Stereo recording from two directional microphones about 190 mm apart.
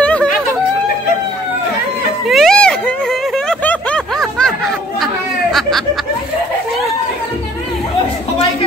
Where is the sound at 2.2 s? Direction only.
Centre (ahead or behind).